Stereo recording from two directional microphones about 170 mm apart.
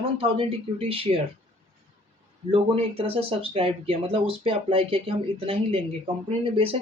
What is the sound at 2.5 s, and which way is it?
Speech, 35° right (ahead or behind).